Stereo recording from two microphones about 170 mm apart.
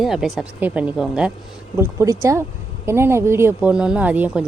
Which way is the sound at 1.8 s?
15° right (ahead or behind).